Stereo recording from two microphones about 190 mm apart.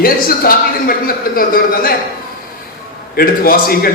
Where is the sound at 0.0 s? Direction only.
50° left (ahead or behind).